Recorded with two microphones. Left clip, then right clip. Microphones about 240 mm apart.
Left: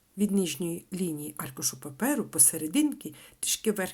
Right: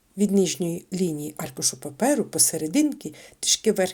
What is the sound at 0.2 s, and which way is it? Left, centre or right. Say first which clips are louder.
Speech: right 7 dB; centre.